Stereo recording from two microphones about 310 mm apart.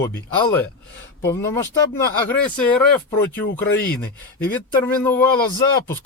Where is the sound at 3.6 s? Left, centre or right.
Left.